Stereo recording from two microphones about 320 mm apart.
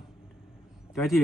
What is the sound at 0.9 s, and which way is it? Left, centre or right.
Speech, centre.